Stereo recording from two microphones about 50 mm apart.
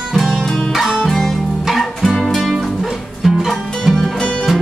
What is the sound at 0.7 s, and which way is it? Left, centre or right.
Music, centre.